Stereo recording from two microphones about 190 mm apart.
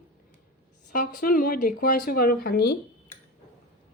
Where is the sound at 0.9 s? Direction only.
45° left (ahead or behind).